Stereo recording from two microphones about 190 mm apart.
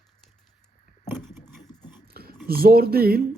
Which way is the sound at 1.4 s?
20° left (ahead or behind).